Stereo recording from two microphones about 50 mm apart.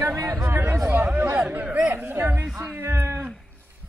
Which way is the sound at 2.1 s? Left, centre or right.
Right.